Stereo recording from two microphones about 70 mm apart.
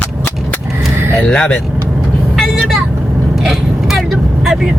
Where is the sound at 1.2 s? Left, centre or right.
Centre.